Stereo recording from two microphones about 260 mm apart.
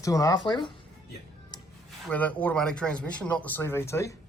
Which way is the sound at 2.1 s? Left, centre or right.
Centre.